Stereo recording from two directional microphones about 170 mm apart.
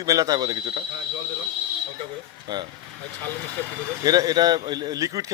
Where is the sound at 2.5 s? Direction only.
25° right (ahead or behind).